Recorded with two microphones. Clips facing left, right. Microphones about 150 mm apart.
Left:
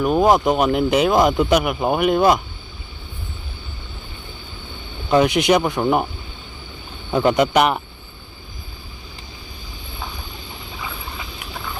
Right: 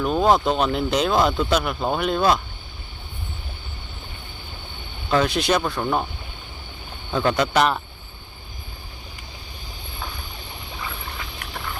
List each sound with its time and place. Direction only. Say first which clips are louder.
0.0 s speech: left 3 dB; 10° left (ahead or behind)
5.1 s speech: left 5 dB; 15° left (ahead or behind)
7.1 s speech: left 4 dB; 15° left (ahead or behind)